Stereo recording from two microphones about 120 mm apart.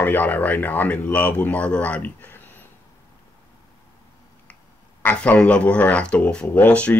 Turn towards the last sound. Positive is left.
turn(degrees=10)  # may be behind; listen again after turning